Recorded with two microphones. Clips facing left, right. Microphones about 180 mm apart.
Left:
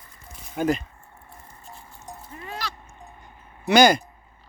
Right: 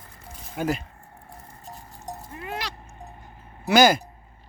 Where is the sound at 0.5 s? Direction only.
5° right (ahead or behind).